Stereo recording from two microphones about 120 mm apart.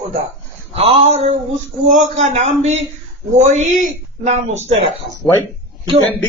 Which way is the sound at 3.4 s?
75° right (ahead or behind).